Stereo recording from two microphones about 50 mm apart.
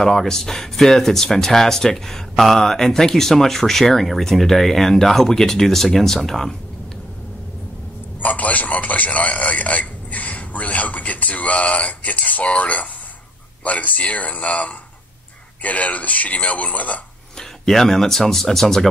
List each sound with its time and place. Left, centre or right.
0.0 s speech: centre
8.2 s a man's voice: left
17.4 s speech: centre